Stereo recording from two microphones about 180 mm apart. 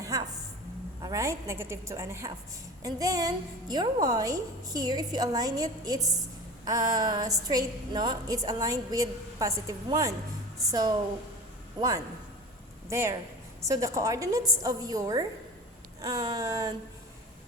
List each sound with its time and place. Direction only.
0.0 s music: 20° right (ahead or behind)
1.0 s a woman's voice: 15° right (ahead or behind)